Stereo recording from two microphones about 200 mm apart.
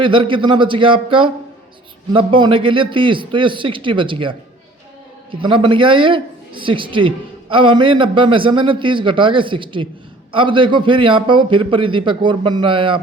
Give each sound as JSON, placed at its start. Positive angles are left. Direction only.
{"t": 0.0, "sound": "a man's voice", "side_deg": -25}